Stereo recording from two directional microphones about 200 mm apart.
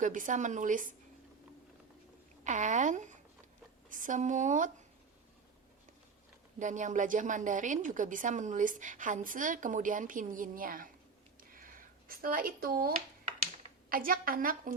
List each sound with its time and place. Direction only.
0.0 s a woman's voice: 40° right (ahead or behind)
2.4 s a woman's voice: 40° right (ahead or behind)
6.6 s a woman's voice: 40° right (ahead or behind)
11.5 s a sound: 45° right (ahead or behind)
13.9 s a woman's voice: 45° right (ahead or behind)